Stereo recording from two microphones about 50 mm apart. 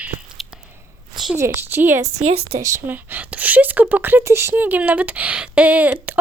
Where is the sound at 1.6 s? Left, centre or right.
Right.